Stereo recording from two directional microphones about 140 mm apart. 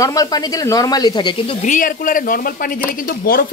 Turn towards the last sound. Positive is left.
turn(degrees=90)